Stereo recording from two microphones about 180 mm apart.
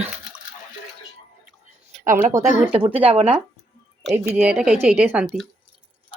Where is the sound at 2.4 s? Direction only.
40° right (ahead or behind).